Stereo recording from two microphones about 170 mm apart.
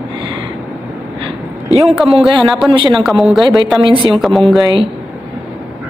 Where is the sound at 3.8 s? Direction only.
25° right (ahead or behind).